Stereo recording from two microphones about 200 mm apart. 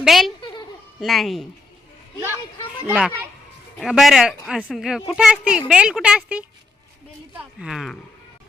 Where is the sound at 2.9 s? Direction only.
5° right (ahead or behind).